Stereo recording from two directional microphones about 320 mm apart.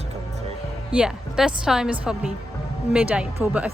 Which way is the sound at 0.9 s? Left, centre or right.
Centre.